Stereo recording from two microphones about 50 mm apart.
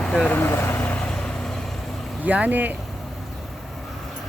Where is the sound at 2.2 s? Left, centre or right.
Right.